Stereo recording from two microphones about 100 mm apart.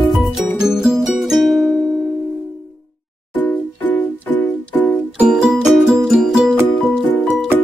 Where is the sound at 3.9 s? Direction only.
15° left (ahead or behind).